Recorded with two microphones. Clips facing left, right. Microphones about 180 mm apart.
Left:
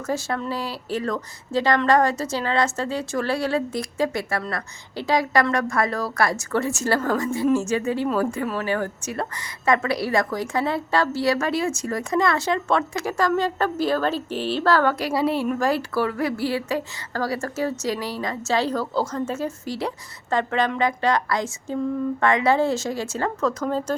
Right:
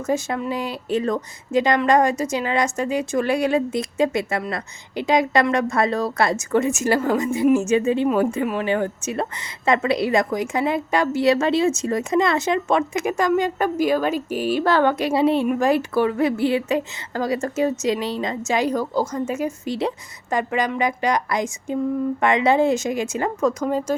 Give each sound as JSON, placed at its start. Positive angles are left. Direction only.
{"t": 0.1, "sound": "a woman's voice", "side_deg": -15}